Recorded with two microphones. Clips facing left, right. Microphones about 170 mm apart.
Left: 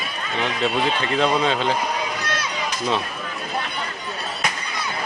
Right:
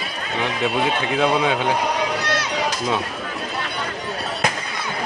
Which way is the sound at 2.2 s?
75° right (ahead or behind).